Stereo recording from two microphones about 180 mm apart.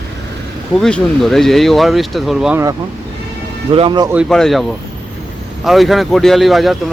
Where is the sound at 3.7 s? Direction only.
30° right (ahead or behind).